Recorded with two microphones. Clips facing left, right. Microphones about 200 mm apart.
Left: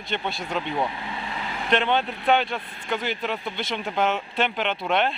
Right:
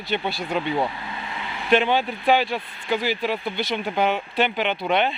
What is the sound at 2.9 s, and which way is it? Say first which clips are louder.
Speech: right 4 dB; 5° right (ahead or behind).